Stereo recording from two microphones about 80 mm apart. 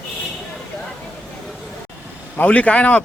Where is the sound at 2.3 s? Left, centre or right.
Centre.